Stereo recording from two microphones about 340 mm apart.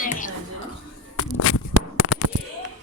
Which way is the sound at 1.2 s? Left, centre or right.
Left.